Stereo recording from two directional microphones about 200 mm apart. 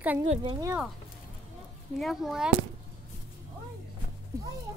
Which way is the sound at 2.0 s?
Centre (ahead or behind).